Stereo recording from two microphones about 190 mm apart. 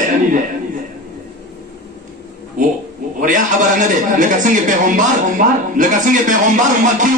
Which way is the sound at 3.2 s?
45° right (ahead or behind).